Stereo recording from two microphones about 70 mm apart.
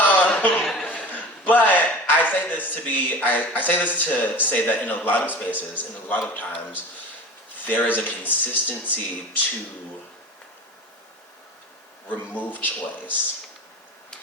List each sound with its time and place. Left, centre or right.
0.0 s a sound: left
0.6 s chuckle: centre
0.9 s a man's voice: left
12.0 s speech: left